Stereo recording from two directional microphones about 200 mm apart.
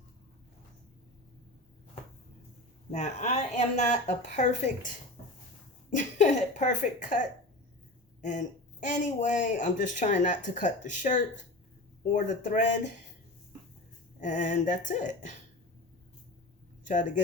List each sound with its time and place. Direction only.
2.9 s speech: 35° left (ahead or behind)
5.9 s speech: 40° left (ahead or behind)
8.2 s speech: 40° left (ahead or behind)
14.2 s speech: 40° left (ahead or behind)